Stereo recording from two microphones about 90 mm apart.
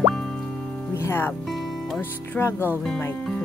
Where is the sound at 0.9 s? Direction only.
30° left (ahead or behind).